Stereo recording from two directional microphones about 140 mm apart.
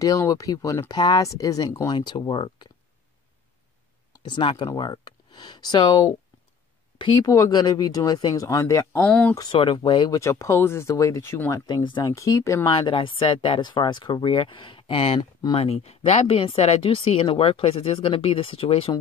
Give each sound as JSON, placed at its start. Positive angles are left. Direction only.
{"t": 0.0, "sound": "speech", "side_deg": 25}
{"t": 4.2, "sound": "speech", "side_deg": 35}
{"t": 7.2, "sound": "speech", "side_deg": 25}
{"t": 9.0, "sound": "speech", "side_deg": 10}
{"t": 9.3, "sound": "speech", "side_deg": 30}
{"t": 10.2, "sound": "speech", "side_deg": 20}
{"t": 11.6, "sound": "speech", "side_deg": 35}
{"t": 12.1, "sound": "speech", "side_deg": 20}
{"t": 12.6, "sound": "speech", "side_deg": 35}